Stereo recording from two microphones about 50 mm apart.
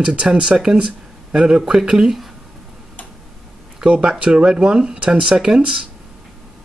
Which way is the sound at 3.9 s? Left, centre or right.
Right.